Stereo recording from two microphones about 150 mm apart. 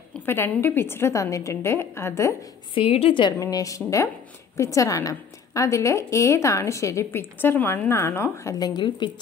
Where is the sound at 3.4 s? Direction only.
20° left (ahead or behind).